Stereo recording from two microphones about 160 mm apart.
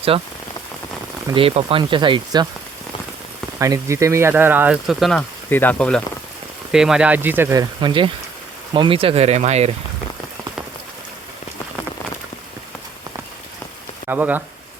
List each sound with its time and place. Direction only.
0.1 s speech: 35° right (ahead or behind)
1.3 s speech: 35° right (ahead or behind)
3.6 s speech: 20° right (ahead or behind); by 5.2 s centre (ahead or behind)
5.5 s speech: 10° left (ahead or behind)
6.7 s speech: 5° right (ahead or behind); by 9.7 s 40° right (ahead or behind)
14.1 s speech: 10° right (ahead or behind)